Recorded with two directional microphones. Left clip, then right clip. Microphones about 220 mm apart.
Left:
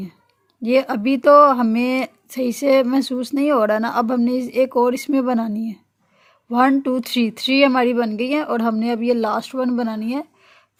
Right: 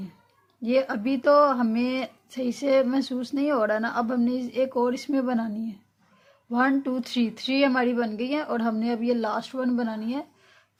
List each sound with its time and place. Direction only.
0.6 s speech: 35° left (ahead or behind)